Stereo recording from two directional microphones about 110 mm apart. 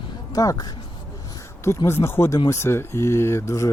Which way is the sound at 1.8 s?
20° left (ahead or behind).